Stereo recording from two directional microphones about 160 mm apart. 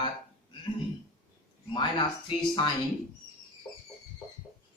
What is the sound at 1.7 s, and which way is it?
Speech, 30° left (ahead or behind).